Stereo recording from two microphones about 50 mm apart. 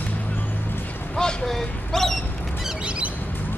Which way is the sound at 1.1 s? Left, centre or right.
Centre.